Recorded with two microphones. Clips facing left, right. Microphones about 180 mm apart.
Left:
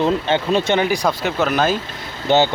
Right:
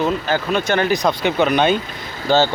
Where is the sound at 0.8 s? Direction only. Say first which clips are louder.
Right 1 dB; 10° left (ahead or behind).